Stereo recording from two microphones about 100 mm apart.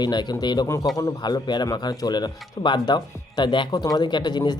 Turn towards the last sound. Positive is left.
turn(degrees=45)  # may be behind; listen again after turning